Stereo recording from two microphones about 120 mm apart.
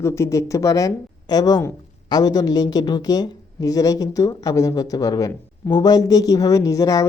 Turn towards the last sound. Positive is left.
turn(degrees=30)  # may be behind; listen again after turning